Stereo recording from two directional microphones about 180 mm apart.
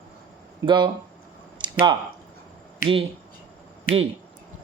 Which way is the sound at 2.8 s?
30° right (ahead or behind).